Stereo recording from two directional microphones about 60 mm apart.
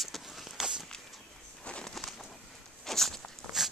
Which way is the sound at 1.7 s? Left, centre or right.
Centre.